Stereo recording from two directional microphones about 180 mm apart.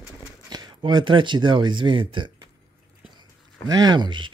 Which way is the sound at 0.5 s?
25° right (ahead or behind).